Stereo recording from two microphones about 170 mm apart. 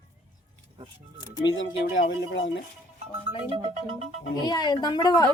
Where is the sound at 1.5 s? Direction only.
90° left.